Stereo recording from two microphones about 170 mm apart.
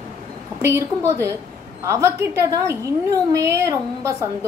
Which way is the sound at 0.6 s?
15° right (ahead or behind).